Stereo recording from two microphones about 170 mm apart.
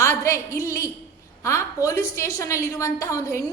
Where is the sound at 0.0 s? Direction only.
15° left (ahead or behind).